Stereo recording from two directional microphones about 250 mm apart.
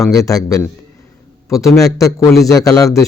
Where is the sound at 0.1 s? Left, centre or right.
Centre.